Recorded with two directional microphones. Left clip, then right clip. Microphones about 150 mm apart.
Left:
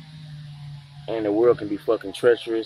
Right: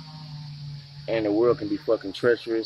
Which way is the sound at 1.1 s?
15° right (ahead or behind).